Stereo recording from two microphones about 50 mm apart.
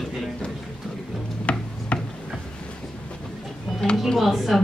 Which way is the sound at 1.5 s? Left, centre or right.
Left.